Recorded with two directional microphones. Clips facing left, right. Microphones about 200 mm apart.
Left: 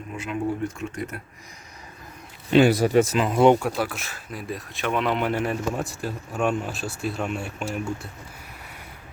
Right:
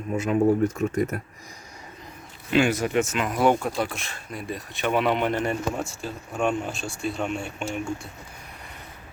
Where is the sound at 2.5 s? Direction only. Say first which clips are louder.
Left 4 dB; 35° left (ahead or behind).